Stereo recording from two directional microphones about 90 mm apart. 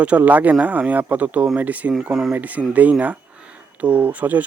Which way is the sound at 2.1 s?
5° right (ahead or behind).